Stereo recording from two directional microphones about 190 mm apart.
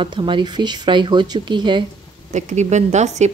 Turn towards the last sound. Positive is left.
turn(degrees=-35)  # may be behind; listen again after turning